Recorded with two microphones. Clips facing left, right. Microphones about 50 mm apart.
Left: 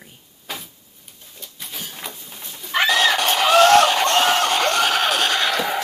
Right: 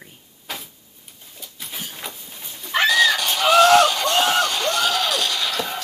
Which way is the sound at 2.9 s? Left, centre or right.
Left.